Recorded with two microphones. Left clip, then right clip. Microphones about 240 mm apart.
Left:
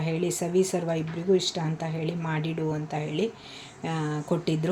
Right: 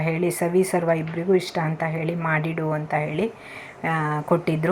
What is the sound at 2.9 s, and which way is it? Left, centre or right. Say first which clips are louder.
Speech: right 5 dB; right.